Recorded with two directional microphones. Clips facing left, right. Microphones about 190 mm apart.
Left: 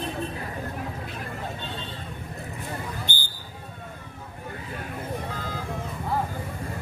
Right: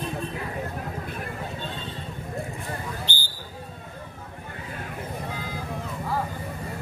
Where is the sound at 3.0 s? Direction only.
50° left (ahead or behind).